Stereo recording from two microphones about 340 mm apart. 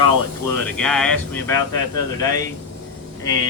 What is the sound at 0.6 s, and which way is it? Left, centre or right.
Speech, centre.